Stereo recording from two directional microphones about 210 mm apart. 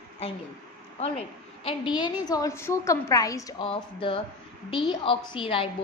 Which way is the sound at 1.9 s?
20° left (ahead or behind).